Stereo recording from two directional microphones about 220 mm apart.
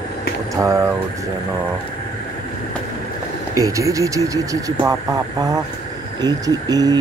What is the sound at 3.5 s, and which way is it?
Speech, 15° right (ahead or behind).